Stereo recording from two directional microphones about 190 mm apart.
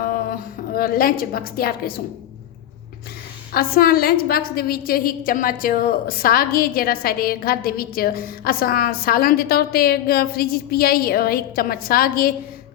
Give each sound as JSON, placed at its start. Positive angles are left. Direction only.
{"t": 0.0, "sound": "a woman's voice", "side_deg": 50}
{"t": 3.5, "sound": "a woman's voice", "side_deg": 50}